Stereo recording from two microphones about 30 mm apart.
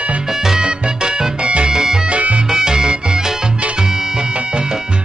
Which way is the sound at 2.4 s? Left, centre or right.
Centre.